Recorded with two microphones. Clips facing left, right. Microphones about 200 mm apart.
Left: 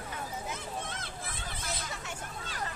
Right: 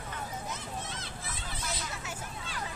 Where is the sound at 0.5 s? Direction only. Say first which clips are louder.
Left 1 dB; 55° left (ahead or behind).